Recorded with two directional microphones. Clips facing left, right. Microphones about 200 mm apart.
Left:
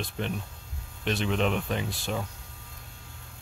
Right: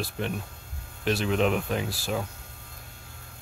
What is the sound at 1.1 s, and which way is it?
Speech, centre (ahead or behind).